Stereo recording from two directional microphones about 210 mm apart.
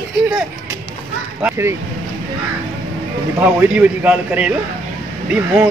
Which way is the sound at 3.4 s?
10° right (ahead or behind).